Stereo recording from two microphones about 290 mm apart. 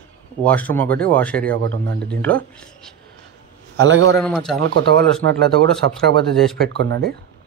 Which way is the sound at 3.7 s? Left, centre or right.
Right.